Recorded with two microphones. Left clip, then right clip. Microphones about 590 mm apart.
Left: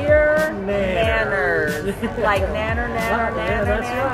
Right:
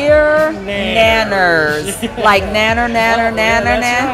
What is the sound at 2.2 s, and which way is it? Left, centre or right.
Speech, right.